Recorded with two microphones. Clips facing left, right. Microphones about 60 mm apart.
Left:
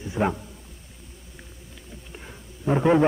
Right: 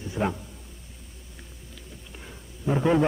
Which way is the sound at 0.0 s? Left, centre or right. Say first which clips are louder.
Left 3 dB; centre.